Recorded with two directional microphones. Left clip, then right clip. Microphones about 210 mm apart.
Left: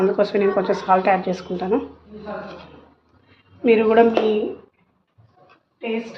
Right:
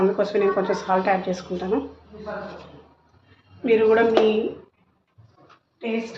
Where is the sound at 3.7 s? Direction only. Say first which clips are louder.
Left 2 dB; 35° left (ahead or behind).